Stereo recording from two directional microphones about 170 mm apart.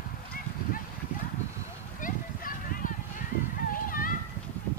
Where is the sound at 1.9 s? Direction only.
55° left (ahead or behind).